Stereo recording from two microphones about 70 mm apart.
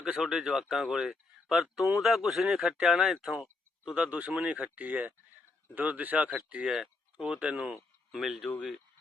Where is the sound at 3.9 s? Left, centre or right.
Centre.